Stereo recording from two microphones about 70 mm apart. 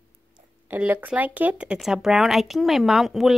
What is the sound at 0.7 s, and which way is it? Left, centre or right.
Speech, right.